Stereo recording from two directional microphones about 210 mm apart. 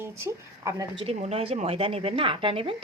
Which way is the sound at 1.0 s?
30° right (ahead or behind).